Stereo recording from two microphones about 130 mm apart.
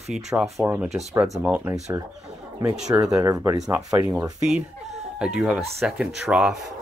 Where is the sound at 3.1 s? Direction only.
25° right (ahead or behind).